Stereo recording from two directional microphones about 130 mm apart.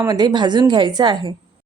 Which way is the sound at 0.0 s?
30° right (ahead or behind).